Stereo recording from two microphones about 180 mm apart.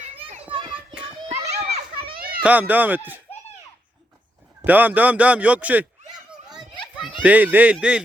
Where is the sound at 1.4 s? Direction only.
65° right (ahead or behind).